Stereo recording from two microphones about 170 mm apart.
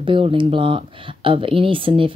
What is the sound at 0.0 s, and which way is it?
Speech, 30° right (ahead or behind).